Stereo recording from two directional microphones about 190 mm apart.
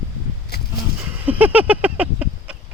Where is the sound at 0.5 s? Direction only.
55° left (ahead or behind).